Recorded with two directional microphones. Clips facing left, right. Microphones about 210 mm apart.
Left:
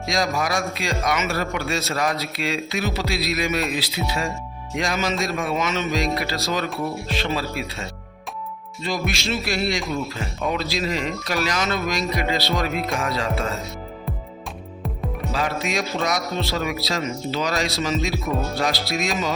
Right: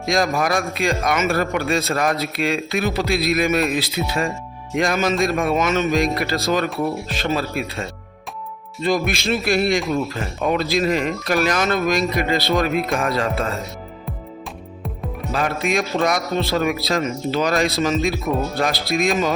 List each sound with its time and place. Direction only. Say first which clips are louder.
0.1 s a man's voice: right 4 dB; 55° right (ahead or behind)
8.8 s a man's voice: right 6 dB; 55° right (ahead or behind)
15.3 s a man's voice: right 4 dB; 55° right (ahead or behind)